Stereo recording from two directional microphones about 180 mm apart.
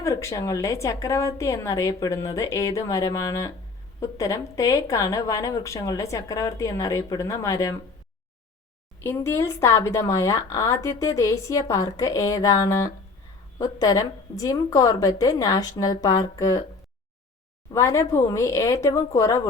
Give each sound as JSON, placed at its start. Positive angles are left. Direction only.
{"t": 0.0, "sound": "a woman's voice", "side_deg": 15}
{"t": 9.0, "sound": "a woman's voice", "side_deg": 15}
{"t": 17.7, "sound": "a woman's voice", "side_deg": 15}